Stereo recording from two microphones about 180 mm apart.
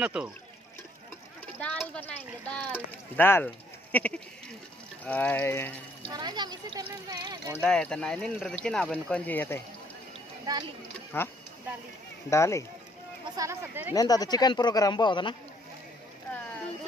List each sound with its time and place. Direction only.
0.0 s speech: 5° right (ahead or behind)
1.6 s speech: 5° left (ahead or behind)
3.9 s sheep: 10° left (ahead or behind)
5.0 s speech: 10° left (ahead or behind)
6.0 s speech: 25° right (ahead or behind)
7.5 s speech: centre (ahead or behind)
10.5 s speech: 20° right (ahead or behind)
11.1 s speech: 15° left (ahead or behind)
13.4 s speech: 15° right (ahead or behind)
13.9 s speech: 20° left (ahead or behind)